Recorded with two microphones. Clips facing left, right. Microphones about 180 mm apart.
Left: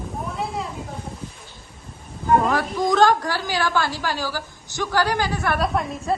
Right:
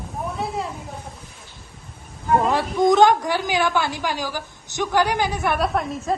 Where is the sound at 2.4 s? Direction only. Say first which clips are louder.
Right 3 dB; 25° right (ahead or behind).